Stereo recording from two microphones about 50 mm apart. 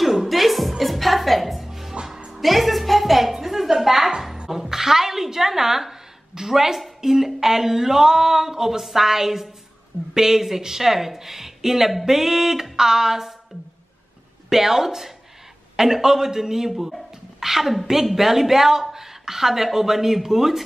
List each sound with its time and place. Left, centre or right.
0.0 s music: centre
2.4 s a sound: centre
4.5 s a woman's voice: centre
14.5 s speech: centre